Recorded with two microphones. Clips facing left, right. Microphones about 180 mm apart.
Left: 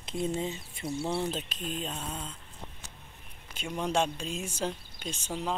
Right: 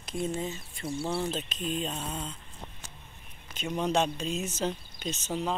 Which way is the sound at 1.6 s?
Centre (ahead or behind).